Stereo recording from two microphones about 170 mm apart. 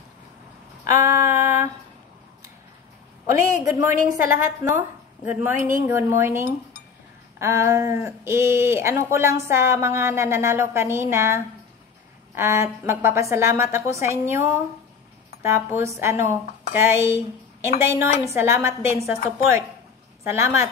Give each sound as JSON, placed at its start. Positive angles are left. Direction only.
{"t": 1.0, "sound": "female singing", "side_deg": -15}
{"t": 3.3, "sound": "a woman's voice", "side_deg": -15}